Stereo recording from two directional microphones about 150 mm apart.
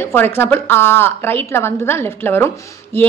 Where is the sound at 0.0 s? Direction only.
15° left (ahead or behind).